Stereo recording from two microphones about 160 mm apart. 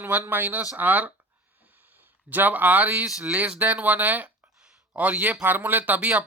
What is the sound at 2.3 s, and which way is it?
Speech, 10° right (ahead or behind).